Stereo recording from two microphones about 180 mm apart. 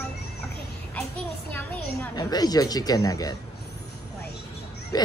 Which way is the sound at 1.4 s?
10° left (ahead or behind).